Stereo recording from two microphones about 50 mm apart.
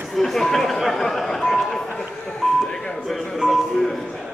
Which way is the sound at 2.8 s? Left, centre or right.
Centre.